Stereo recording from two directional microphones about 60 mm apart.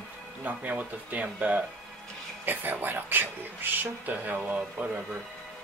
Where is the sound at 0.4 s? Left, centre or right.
Right.